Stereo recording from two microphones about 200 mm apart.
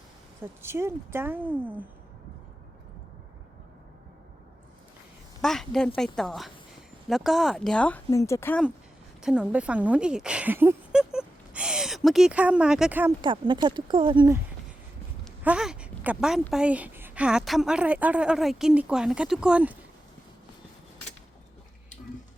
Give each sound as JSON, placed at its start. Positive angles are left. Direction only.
{"t": 0.6, "sound": "speech", "side_deg": -10}
{"t": 5.4, "sound": "a woman's voice", "side_deg": 0}
{"t": 9.2, "sound": "speech", "side_deg": -5}
{"t": 13.2, "sound": "speech", "side_deg": -25}
{"t": 15.2, "sound": "a sound", "side_deg": -5}
{"t": 16.5, "sound": "a woman's voice", "side_deg": -5}